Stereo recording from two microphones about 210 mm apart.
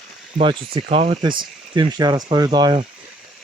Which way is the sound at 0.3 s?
25° right (ahead or behind).